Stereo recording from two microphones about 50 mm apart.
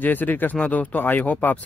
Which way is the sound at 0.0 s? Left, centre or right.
Left.